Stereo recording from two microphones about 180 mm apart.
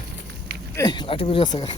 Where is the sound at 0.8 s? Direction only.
25° left (ahead or behind).